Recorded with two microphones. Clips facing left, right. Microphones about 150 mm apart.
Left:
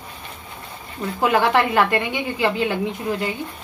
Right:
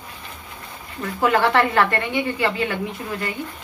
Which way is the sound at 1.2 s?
15° left (ahead or behind).